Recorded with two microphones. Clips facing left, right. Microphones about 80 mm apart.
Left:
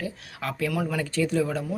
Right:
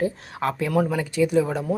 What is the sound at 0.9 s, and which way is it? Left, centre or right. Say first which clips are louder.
Speech: right 4 dB; centre.